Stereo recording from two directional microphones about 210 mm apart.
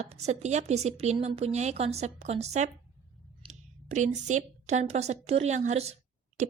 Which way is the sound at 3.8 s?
35° right (ahead or behind).